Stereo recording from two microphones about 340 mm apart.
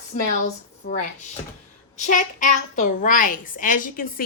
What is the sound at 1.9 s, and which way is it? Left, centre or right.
A woman's voice, left.